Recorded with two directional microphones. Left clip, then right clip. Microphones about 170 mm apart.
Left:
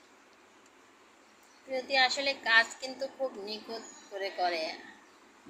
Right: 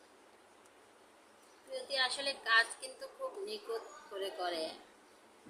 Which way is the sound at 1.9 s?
Centre (ahead or behind).